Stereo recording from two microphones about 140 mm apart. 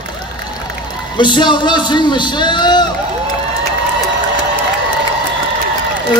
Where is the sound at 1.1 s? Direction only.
35° left (ahead or behind).